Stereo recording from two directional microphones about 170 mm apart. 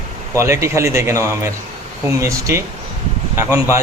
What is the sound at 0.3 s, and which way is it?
A man's voice, 15° right (ahead or behind).